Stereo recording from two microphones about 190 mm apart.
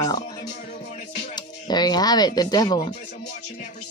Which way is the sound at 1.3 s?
20° left (ahead or behind).